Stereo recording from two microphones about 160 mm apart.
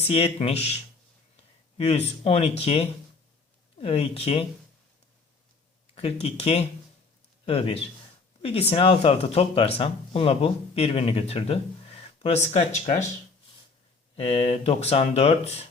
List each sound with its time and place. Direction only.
0.1 s speech: 40° left (ahead or behind)
1.8 s speech: 45° left (ahead or behind)
5.9 s a man's voice: 40° left (ahead or behind)
14.2 s speech: 40° left (ahead or behind)